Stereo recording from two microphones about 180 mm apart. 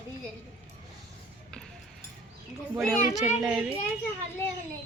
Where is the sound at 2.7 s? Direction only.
5° right (ahead or behind).